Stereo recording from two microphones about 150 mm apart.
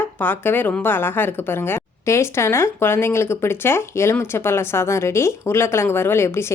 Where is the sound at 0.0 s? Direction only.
15° left (ahead or behind).